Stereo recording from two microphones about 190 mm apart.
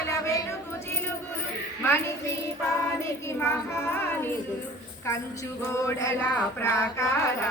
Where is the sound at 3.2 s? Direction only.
15° left (ahead or behind).